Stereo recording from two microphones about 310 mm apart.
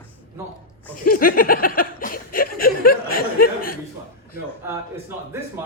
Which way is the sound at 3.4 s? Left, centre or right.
Left.